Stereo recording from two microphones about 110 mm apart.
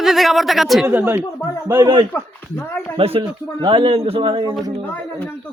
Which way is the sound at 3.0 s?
60° right (ahead or behind).